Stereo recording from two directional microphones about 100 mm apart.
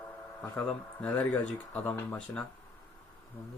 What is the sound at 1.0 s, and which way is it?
Speech, 10° left (ahead or behind).